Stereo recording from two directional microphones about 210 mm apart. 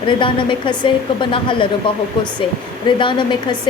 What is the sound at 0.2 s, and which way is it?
A woman's voice, 25° left (ahead or behind).